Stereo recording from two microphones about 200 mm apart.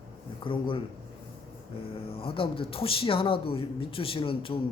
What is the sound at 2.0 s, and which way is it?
Speech, 30° left (ahead or behind).